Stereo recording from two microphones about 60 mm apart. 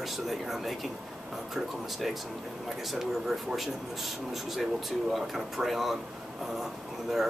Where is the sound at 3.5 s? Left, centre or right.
Centre.